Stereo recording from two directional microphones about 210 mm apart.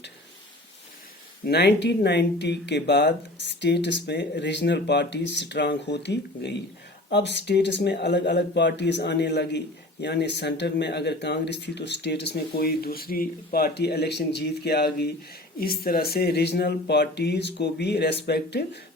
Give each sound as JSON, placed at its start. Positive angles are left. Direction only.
{"t": 1.5, "sound": "speech", "side_deg": 50}